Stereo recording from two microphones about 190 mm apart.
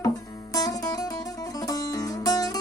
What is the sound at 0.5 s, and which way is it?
Music, 20° left (ahead or behind).